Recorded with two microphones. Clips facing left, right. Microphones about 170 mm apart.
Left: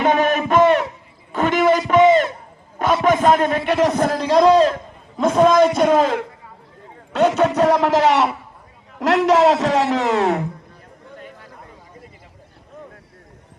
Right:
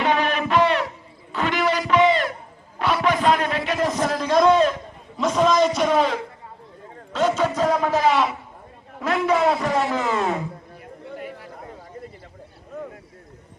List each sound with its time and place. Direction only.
0.0 s a sound: 45° left (ahead or behind)
3.8 s a man's voice: 65° left (ahead or behind)
4.1 s a man's voice: 30° left (ahead or behind)
5.1 s a man's voice: 50° left (ahead or behind)
7.1 s a man's voice: 65° left (ahead or behind)
9.0 s a man's voice: 85° left